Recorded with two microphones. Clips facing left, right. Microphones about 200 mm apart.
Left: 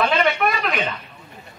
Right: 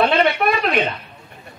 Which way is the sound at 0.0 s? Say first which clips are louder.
Right 3 dB; 35° right (ahead or behind).